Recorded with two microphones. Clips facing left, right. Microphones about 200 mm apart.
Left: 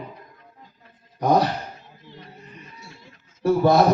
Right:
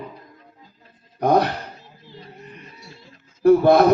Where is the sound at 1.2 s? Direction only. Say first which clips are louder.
Right 2 dB; 60° right (ahead or behind).